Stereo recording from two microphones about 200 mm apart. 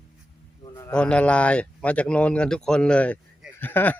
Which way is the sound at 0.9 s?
5° left (ahead or behind).